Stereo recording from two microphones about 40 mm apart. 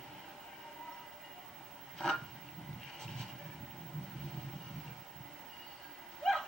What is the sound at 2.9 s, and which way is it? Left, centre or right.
Vehicle, centre.